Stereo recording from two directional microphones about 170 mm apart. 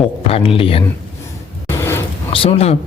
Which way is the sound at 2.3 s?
35° left (ahead or behind).